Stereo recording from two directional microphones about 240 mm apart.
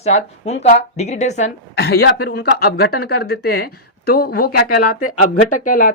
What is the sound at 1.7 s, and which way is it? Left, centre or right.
Speech, left.